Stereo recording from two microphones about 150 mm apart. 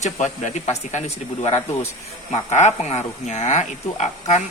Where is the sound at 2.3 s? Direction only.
50° left (ahead or behind).